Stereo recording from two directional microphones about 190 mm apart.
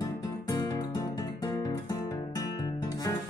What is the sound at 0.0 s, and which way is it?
Music, 20° left (ahead or behind).